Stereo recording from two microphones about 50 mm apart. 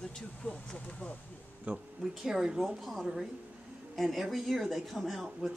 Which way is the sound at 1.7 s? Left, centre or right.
Right.